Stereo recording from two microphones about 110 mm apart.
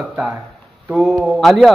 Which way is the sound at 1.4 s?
Centre (ahead or behind).